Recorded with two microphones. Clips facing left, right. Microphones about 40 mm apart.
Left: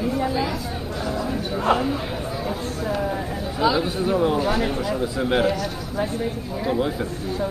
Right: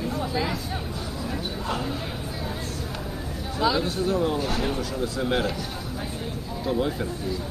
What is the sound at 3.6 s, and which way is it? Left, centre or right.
Speech, centre.